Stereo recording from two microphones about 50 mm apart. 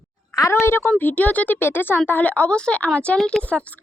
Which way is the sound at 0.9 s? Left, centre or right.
Left.